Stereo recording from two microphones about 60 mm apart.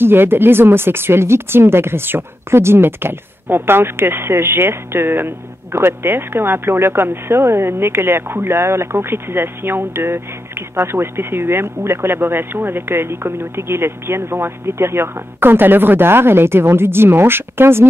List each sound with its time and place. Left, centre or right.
0.0 s speech: right